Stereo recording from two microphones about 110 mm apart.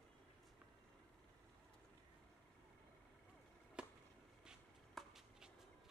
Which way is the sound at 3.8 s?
10° right (ahead or behind).